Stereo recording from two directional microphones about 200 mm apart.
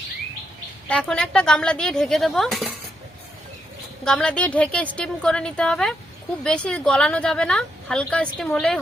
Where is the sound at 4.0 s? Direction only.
5° left (ahead or behind).